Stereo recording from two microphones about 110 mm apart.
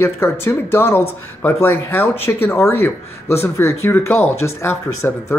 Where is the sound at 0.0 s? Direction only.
20° left (ahead or behind).